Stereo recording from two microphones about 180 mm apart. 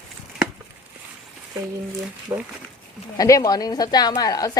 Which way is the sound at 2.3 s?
20° right (ahead or behind).